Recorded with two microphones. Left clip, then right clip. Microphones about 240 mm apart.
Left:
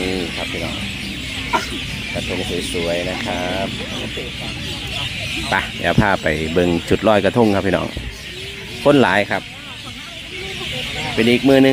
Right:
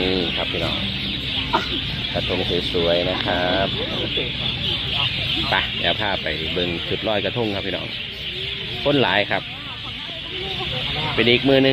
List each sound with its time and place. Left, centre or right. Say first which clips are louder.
0.1 s music: right 2 dB; centre
2.8 s speech: right 2 dB; centre
5.5 s speech: left 4 dB; left
11.2 s speech: left 3 dB; left